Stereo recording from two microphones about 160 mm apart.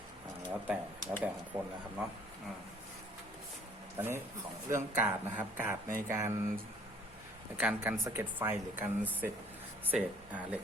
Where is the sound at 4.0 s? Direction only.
20° right (ahead or behind).